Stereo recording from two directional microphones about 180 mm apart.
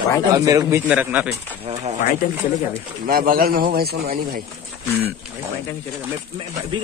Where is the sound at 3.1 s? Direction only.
55° right (ahead or behind).